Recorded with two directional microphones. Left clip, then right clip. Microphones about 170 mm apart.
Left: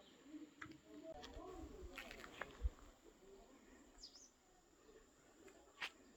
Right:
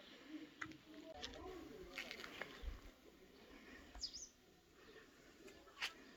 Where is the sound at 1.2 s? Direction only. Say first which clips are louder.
Right 3 dB; 50° left (ahead or behind).